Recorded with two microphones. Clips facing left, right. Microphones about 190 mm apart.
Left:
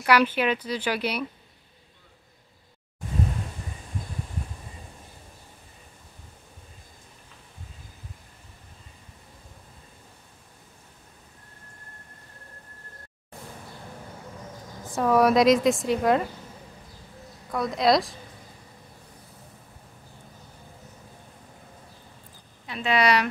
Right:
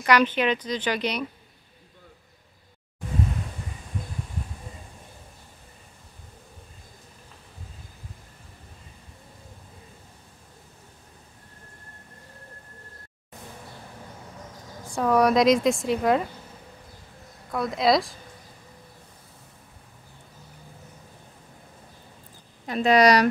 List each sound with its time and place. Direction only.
0.0 s speech: 10° left (ahead or behind)
14.9 s a woman's voice: centre (ahead or behind)
17.5 s a woman's voice: centre (ahead or behind)
22.7 s a woman's voice: 40° right (ahead or behind)